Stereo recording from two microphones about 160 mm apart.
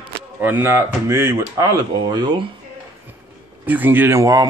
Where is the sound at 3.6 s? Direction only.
10° right (ahead or behind).